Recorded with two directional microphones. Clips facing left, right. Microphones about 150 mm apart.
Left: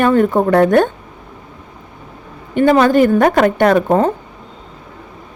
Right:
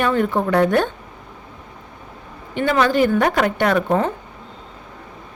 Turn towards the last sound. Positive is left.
turn(degrees=45)  # may be behind; listen again after turning